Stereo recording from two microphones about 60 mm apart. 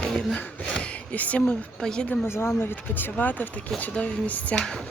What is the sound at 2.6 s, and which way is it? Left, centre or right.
Speech, left.